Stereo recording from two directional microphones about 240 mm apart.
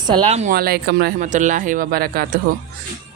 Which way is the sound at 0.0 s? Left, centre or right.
Right.